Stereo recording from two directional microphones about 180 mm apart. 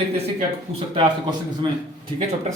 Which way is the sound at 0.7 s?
35° right (ahead or behind).